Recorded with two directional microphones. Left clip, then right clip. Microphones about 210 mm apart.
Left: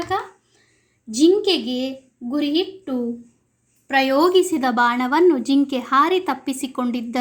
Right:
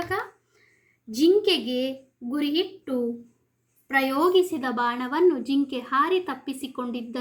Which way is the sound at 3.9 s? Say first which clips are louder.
Left 5 dB; 35° left (ahead or behind).